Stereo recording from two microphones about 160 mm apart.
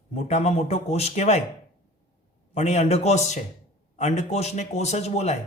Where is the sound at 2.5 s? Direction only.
45° left (ahead or behind).